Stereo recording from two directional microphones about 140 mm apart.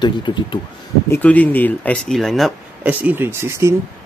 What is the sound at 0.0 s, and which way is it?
Speech, 35° left (ahead or behind).